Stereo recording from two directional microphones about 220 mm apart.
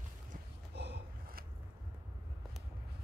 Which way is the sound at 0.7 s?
50° right (ahead or behind).